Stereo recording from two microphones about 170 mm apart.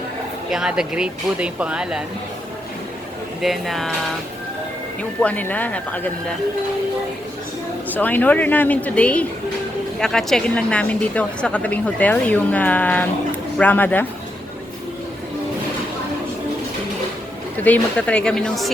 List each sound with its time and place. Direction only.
0.5 s speech: 5° right (ahead or behind)
3.4 s speech: centre (ahead or behind)
5.2 s a woman's voice: 10° left (ahead or behind)
7.9 s a woman's voice: 10° left (ahead or behind)
17.6 s a woman's voice: 10° left (ahead or behind)